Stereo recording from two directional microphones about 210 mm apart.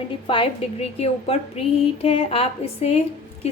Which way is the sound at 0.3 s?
25° left (ahead or behind).